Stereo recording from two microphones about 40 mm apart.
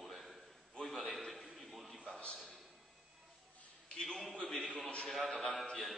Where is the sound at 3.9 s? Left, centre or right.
Centre.